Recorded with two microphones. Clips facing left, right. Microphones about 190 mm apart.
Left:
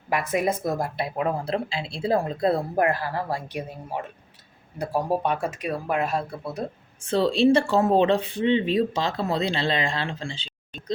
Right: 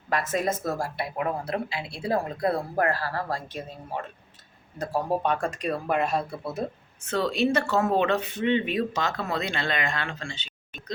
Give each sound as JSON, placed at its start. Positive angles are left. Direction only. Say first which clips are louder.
{"t": 0.1, "sound": "speech", "louder": "left 2 dB", "side_deg": 10}
{"t": 7.0, "sound": "speech", "louder": "left 5 dB", "side_deg": 30}